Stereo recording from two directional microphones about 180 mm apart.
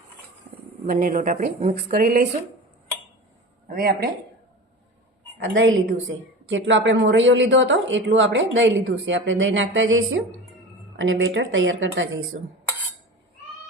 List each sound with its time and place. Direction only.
0.9 s a woman's voice: 50° right (ahead or behind)
3.7 s speech: 55° right (ahead or behind)
5.4 s a woman's voice: 90° right